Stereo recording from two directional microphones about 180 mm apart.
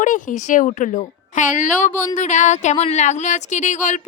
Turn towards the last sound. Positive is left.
turn(degrees=45)  # may be behind; listen again after turning